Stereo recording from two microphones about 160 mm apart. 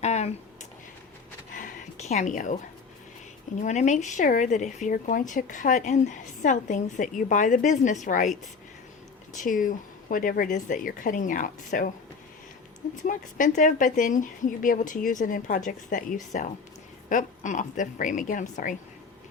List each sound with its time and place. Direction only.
0.0 s a sound: 45° left (ahead or behind)
3.6 s speech: 50° left (ahead or behind)
9.3 s speech: 55° left (ahead or behind)
13.1 s speech: 55° left (ahead or behind)